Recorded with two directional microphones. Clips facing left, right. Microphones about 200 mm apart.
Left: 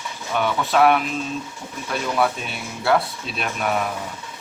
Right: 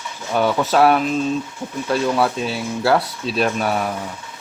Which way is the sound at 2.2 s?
35° right (ahead or behind).